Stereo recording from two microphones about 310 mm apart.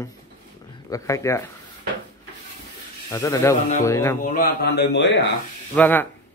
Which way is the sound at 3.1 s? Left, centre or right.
Centre.